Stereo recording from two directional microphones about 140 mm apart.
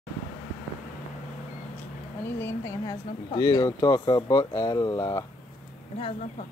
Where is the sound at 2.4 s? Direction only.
20° left (ahead or behind).